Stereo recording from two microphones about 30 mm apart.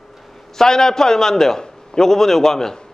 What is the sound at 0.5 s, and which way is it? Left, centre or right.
A man's voice, centre.